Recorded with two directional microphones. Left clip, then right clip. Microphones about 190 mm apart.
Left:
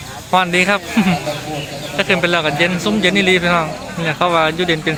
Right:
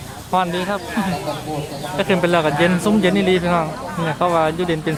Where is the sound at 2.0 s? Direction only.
10° right (ahead or behind).